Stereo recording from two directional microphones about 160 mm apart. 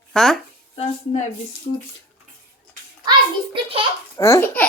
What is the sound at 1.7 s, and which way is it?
Speech, 55° left (ahead or behind).